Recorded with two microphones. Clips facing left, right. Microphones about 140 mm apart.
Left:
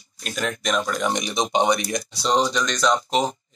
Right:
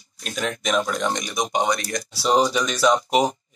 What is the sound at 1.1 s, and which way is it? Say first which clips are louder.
Speech: left 2 dB; 25° left (ahead or behind).